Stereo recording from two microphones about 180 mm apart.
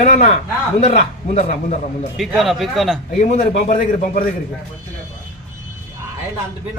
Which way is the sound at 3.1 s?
45° left (ahead or behind).